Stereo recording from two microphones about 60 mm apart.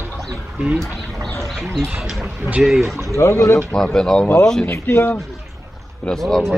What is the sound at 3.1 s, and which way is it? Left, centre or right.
Speech, left.